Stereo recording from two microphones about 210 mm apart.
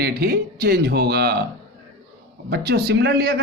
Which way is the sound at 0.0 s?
50° right (ahead or behind).